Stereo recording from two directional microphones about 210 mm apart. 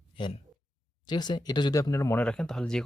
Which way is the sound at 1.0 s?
20° left (ahead or behind).